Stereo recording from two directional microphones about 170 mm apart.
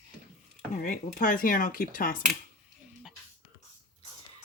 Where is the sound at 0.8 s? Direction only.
50° left (ahead or behind).